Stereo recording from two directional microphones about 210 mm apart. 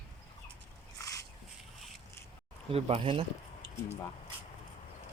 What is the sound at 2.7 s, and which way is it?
Speech, 30° right (ahead or behind).